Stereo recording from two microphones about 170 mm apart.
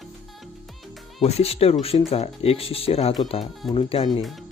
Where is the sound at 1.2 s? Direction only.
35° left (ahead or behind).